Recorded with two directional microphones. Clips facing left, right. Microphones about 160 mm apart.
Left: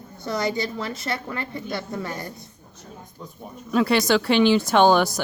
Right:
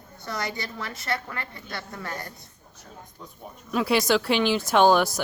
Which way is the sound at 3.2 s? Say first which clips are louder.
Left 5 dB; centre (ahead or behind).